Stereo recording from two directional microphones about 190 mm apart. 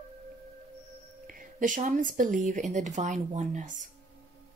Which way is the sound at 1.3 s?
45° right (ahead or behind).